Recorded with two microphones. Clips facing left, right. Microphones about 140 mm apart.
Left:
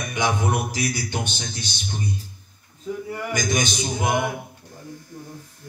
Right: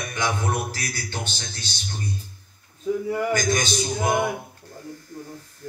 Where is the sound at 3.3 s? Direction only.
15° left (ahead or behind).